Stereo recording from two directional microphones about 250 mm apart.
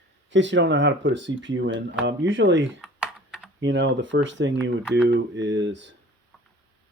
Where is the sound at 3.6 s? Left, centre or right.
Right.